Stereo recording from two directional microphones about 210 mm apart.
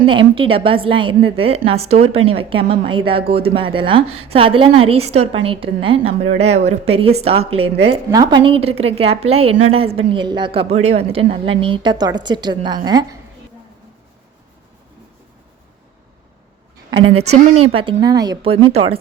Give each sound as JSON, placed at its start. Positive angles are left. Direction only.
{"t": 0.1, "sound": "a woman's voice", "side_deg": -25}
{"t": 17.0, "sound": "a woman's voice", "side_deg": -80}
{"t": 17.7, "sound": "a woman's voice", "side_deg": -25}